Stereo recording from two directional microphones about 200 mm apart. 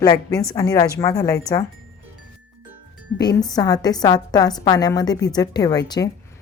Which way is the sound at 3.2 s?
20° left (ahead or behind).